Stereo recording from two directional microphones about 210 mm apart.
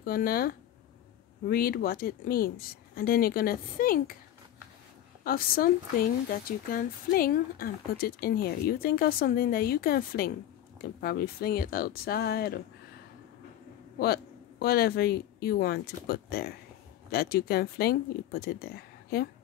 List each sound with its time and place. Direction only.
0.0 s speech: 45° left (ahead or behind)
5.2 s speech: 45° left (ahead or behind)
13.9 s speech: 50° left (ahead or behind)